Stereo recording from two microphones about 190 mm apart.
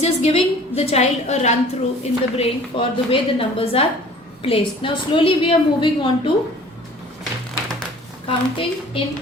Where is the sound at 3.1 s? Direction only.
30° left (ahead or behind).